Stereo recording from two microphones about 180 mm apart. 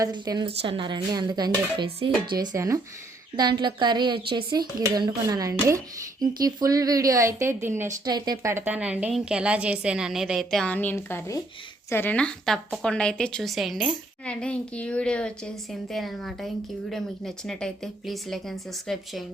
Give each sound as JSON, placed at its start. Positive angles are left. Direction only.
{"t": 0.0, "sound": "a woman's voice", "side_deg": -25}